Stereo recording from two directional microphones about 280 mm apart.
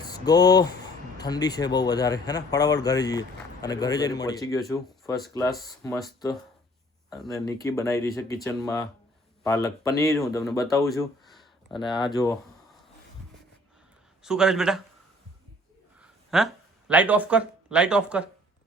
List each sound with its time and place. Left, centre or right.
0.0 s speech: centre
7.3 s speech: centre
10.1 s speech: centre
10.3 s speech: centre
14.3 s speech: centre
16.0 s a sound: centre
16.9 s speech: centre